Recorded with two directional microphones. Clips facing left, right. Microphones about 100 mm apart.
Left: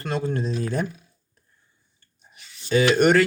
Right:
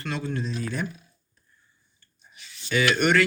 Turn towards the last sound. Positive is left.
turn(degrees=40)  # may be behind; listen again after turning